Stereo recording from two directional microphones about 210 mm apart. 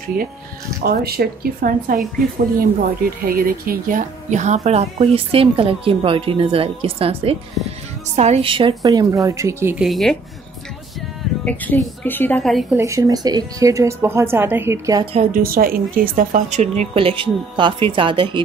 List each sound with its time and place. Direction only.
0.2 s speech: 45° right (ahead or behind)
3.3 s speech: 45° right (ahead or behind); by 9.8 s 10° right (ahead or behind)
9.8 s a woman's voice: centre (ahead or behind)
11.4 s a woman's voice: 5° left (ahead or behind)
12.7 s speech: 15° right (ahead or behind)
15.1 s speech: 40° right (ahead or behind); by 18.4 s 25° right (ahead or behind)